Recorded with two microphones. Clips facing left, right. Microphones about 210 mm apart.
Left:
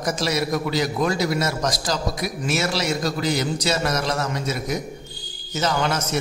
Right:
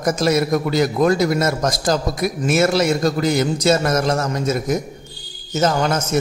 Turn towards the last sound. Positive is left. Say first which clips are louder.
# right 4 dB
turn(degrees=-45)  # may be behind; listen again after turning